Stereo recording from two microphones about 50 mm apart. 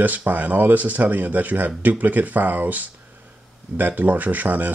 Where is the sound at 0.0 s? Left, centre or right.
Right.